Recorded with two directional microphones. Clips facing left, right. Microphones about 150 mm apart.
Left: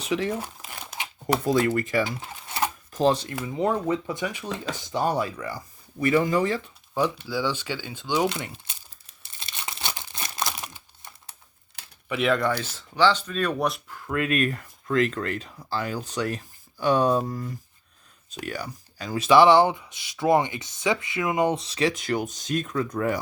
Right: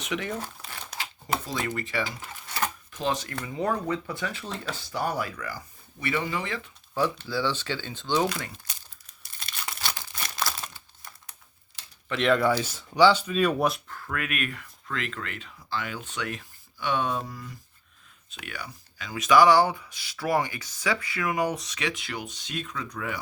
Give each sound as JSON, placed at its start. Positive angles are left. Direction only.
{"t": 0.0, "sound": "speech", "side_deg": 30}
{"t": 0.3, "sound": "crumpling", "side_deg": 10}
{"t": 1.5, "sound": "speech", "side_deg": 50}
{"t": 2.0, "sound": "drawer open or close", "side_deg": 25}
{"t": 2.9, "sound": "speech", "side_deg": 35}
{"t": 3.6, "sound": "speech", "side_deg": 20}
{"t": 6.0, "sound": "speech", "side_deg": 45}
{"t": 6.9, "sound": "speech", "side_deg": 15}
{"t": 8.3, "sound": "speech", "side_deg": 20}
{"t": 9.4, "sound": "crumpling", "side_deg": 20}
{"t": 12.0, "sound": "speech", "side_deg": 5}
{"t": 14.1, "sound": "speech", "side_deg": 30}